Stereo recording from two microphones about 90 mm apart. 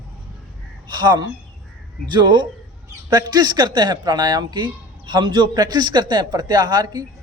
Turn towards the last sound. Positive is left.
turn(degrees=-50)  # may be behind; listen again after turning